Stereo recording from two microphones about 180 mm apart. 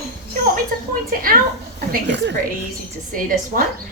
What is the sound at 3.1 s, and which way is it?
Speech, 50° right (ahead or behind).